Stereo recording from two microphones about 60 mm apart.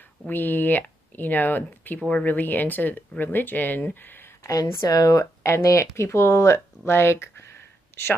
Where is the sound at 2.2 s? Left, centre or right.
Left.